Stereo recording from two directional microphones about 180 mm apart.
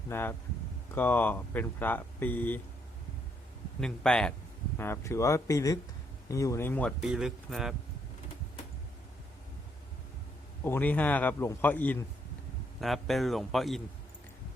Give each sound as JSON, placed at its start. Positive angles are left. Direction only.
{"t": 0.1, "sound": "speech", "side_deg": 10}
{"t": 3.8, "sound": "speech", "side_deg": 5}
{"t": 7.0, "sound": "speech", "side_deg": 0}
{"t": 10.6, "sound": "speech", "side_deg": 10}